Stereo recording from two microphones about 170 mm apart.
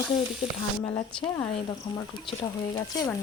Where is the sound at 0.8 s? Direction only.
10° left (ahead or behind).